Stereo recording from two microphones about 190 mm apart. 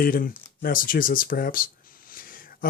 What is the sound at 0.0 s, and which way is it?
Speech, 45° left (ahead or behind).